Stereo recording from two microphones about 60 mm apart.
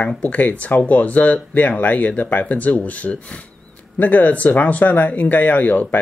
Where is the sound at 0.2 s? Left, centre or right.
Left.